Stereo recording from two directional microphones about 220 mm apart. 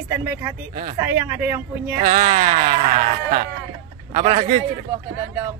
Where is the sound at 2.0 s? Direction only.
35° right (ahead or behind).